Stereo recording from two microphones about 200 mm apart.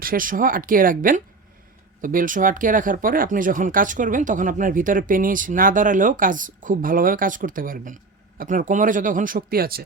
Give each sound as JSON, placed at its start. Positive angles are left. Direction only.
{"t": 0.0, "sound": "speech", "side_deg": -45}